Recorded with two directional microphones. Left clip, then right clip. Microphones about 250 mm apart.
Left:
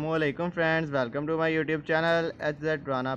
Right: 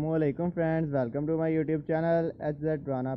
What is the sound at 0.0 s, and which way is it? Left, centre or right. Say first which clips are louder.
Speech: left 1 dB; centre.